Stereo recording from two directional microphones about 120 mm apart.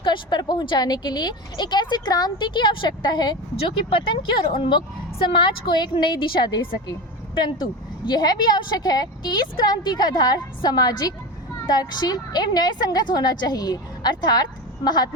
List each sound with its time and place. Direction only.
0.0 s a woman's voice: 40° left (ahead or behind)